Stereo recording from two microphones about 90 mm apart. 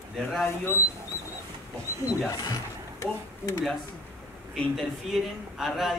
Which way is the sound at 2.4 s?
40° left (ahead or behind).